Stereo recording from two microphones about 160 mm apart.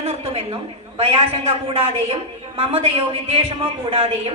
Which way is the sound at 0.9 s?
35° right (ahead or behind).